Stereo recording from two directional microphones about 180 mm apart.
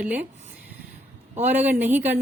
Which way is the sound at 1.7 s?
10° right (ahead or behind).